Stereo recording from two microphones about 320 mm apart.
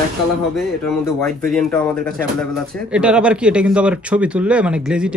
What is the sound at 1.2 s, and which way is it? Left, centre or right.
Speech, centre.